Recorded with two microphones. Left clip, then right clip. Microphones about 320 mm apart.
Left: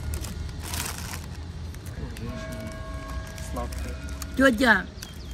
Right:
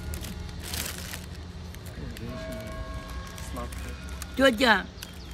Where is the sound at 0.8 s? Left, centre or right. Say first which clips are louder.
Left 2 dB; centre.